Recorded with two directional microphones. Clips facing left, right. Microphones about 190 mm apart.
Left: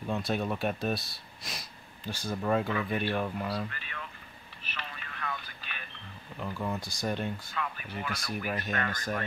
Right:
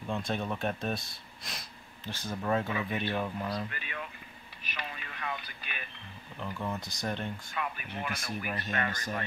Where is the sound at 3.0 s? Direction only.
5° left (ahead or behind).